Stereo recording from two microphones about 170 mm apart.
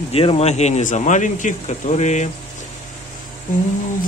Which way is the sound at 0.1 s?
35° left (ahead or behind).